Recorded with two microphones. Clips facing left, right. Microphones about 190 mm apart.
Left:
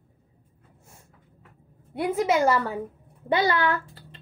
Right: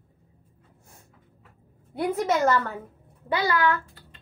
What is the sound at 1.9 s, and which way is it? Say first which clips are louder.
Speech: left 1 dB; 5° left (ahead or behind).